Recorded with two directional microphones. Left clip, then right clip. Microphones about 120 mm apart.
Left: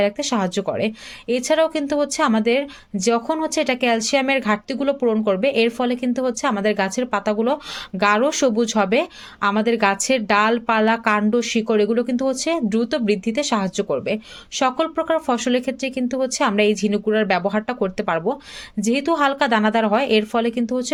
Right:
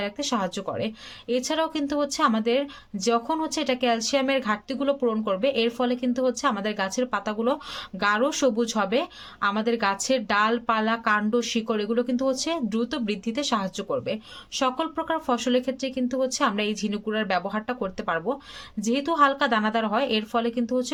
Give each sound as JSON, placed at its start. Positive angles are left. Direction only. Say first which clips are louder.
{"t": 0.0, "sound": "speech", "louder": "left 7 dB", "side_deg": 35}